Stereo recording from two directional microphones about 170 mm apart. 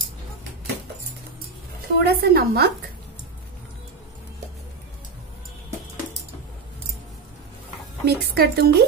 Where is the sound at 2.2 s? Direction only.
65° right (ahead or behind).